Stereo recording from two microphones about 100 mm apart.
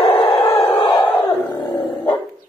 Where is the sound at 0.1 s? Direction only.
60° left (ahead or behind).